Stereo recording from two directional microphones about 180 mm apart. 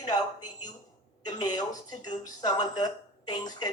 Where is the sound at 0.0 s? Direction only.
20° left (ahead or behind).